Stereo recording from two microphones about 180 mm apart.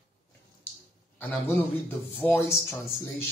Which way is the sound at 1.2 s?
10° left (ahead or behind).